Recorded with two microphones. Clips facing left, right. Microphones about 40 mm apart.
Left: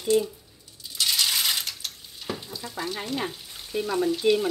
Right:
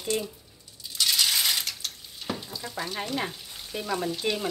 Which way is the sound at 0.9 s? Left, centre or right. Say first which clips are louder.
Even; centre.